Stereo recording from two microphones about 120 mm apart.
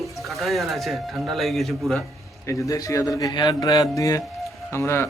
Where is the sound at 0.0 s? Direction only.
Centre (ahead or behind).